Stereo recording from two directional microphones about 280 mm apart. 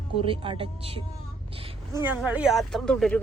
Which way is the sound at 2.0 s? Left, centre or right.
Centre.